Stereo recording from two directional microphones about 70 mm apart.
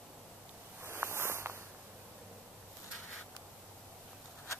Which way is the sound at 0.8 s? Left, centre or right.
Right.